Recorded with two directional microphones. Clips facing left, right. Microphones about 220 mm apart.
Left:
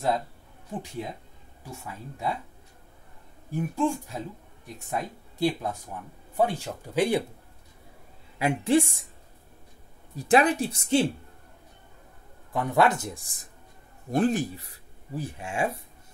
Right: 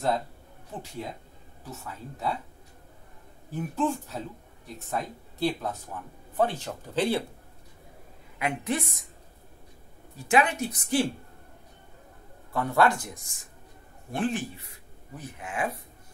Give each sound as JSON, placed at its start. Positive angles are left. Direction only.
{"t": 1.7, "sound": "speech", "side_deg": 10}
{"t": 3.5, "sound": "speech", "side_deg": 10}
{"t": 8.4, "sound": "speech", "side_deg": 30}
{"t": 10.1, "sound": "speech", "side_deg": 35}
{"t": 12.5, "sound": "speech", "side_deg": 20}
{"t": 15.1, "sound": "speech", "side_deg": 30}